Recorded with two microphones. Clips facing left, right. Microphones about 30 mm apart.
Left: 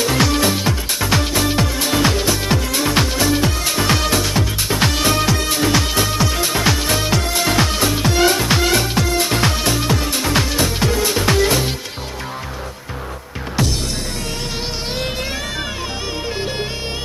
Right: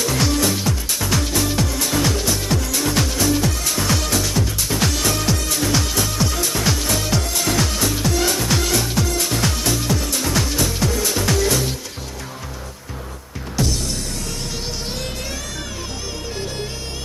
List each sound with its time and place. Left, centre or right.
0.0 s music: left